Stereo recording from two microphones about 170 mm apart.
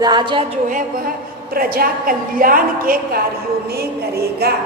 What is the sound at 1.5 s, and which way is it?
A woman's voice, 60° right (ahead or behind).